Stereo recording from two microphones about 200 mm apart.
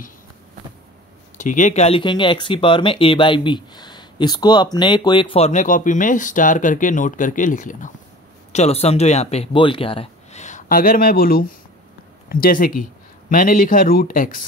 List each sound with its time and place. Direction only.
1.4 s speech: 40° left (ahead or behind)